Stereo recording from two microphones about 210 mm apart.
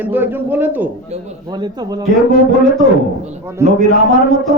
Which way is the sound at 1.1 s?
30° right (ahead or behind).